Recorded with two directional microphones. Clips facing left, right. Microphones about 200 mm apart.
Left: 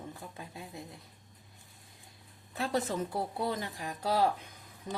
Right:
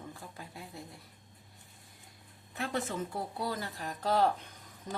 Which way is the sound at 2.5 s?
35° left (ahead or behind).